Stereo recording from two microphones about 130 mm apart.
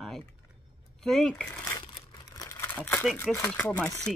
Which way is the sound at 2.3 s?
20° left (ahead or behind).